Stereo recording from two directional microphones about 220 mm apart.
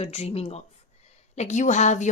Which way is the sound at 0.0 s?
30° left (ahead or behind).